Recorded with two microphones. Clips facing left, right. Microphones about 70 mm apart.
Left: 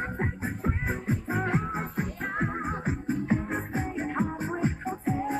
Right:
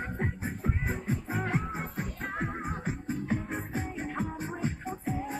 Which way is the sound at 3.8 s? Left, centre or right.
Centre.